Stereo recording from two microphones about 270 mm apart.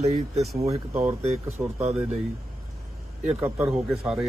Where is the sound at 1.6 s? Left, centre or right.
Centre.